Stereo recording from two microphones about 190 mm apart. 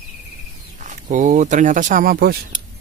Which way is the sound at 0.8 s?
40° right (ahead or behind).